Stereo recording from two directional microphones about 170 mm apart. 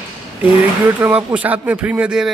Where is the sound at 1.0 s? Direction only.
10° right (ahead or behind).